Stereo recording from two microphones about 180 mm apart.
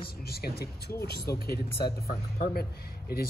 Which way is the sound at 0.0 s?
60° left (ahead or behind).